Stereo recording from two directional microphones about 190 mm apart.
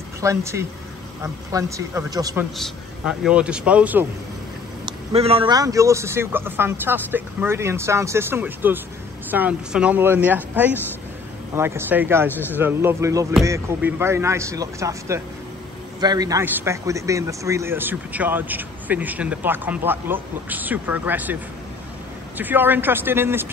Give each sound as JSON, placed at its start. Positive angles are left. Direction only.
{"t": 0.2, "sound": "a man's voice", "side_deg": -15}
{"t": 2.5, "sound": "a man's voice", "side_deg": 0}
{"t": 4.8, "sound": "a man's voice", "side_deg": -30}
{"t": 12.3, "sound": "a man's voice", "side_deg": 10}
{"t": 12.5, "sound": "a man's voice", "side_deg": -10}
{"t": 22.4, "sound": "a man's voice", "side_deg": -10}